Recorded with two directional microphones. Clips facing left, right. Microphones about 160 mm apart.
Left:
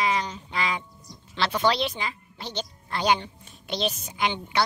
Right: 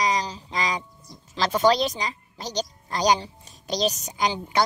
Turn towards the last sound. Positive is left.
turn(degrees=-35)  # may be behind; listen again after turning